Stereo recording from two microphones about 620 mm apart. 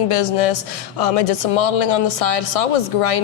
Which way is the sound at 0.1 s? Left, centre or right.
Left.